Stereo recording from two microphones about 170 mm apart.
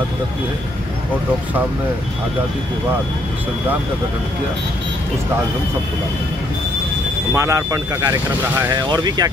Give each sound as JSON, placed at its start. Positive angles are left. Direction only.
{"t": 7.3, "sound": "speech", "side_deg": -20}